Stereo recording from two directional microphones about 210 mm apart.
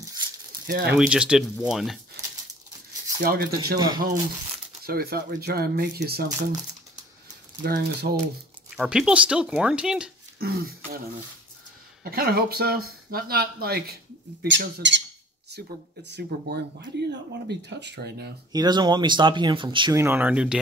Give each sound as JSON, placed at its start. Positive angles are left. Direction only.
{"t": 0.0, "sound": "a sound", "side_deg": -20}
{"t": 0.7, "sound": "speech", "side_deg": -45}
{"t": 0.9, "sound": "speech", "side_deg": -5}
{"t": 3.2, "sound": "speech", "side_deg": -45}
{"t": 3.7, "sound": "speech", "side_deg": -20}
{"t": 4.8, "sound": "speech", "side_deg": -45}
{"t": 7.6, "sound": "speech", "side_deg": -45}
{"t": 8.7, "sound": "speech", "side_deg": -5}
{"t": 10.4, "sound": "speech", "side_deg": -45}
{"t": 12.0, "sound": "speech", "side_deg": -45}
{"t": 18.5, "sound": "speech", "side_deg": -20}